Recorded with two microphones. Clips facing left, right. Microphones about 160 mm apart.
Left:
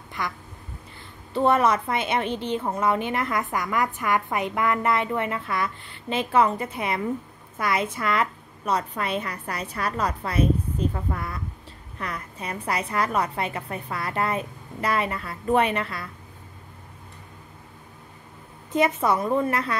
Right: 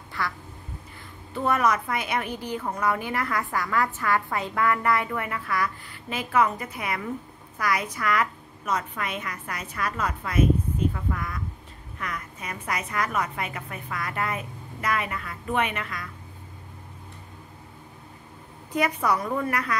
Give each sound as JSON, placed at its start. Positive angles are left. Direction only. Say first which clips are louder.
{"t": 0.2, "sound": "quack", "louder": "even", "side_deg": 20}
{"t": 1.3, "sound": "a woman's voice", "louder": "left 4 dB", "side_deg": 30}
{"t": 18.7, "sound": "a woman's voice", "louder": "left 3 dB", "side_deg": 25}